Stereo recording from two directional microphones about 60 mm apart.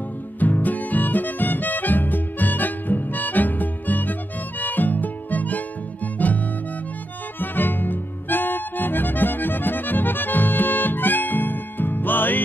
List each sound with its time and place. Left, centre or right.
0.4 s music: left
7.3 s harmonica: left